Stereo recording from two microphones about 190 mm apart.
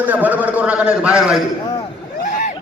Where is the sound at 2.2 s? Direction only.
45° left (ahead or behind).